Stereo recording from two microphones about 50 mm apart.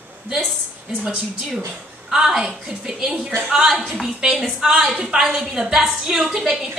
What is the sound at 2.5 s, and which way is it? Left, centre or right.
Speech, centre.